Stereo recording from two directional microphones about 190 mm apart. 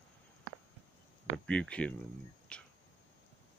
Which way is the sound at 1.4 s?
5° left (ahead or behind).